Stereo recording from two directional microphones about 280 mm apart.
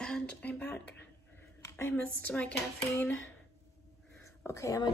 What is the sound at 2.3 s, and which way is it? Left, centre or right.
Speech, centre.